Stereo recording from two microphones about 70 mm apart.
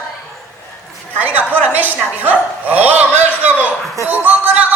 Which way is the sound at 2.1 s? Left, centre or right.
Right.